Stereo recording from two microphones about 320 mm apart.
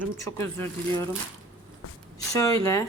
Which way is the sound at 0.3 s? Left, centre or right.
Centre.